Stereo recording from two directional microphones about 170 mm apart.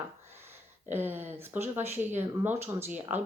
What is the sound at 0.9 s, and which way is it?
Speech, 10° right (ahead or behind).